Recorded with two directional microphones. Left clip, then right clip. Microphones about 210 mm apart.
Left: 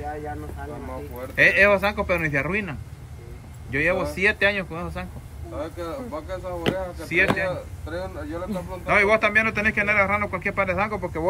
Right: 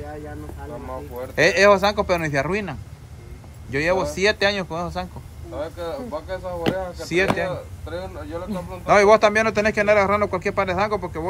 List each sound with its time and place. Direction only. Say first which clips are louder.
1.3 s speech: right 2 dB; 15° right (ahead or behind)
5.6 s speech: right 3 dB; 30° right (ahead or behind)
7.0 s speech: left 1 dB; 10° right (ahead or behind)
7.5 s speech: right 1 dB; 25° right (ahead or behind)
8.5 s speech: right 6 dB; centre (ahead or behind)